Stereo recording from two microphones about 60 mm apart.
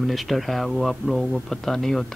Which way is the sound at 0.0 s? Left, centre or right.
Centre.